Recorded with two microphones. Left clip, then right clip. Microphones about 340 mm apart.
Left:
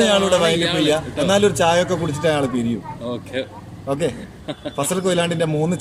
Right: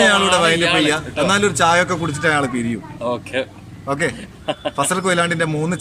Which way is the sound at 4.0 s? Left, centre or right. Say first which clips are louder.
Right 2 dB; centre.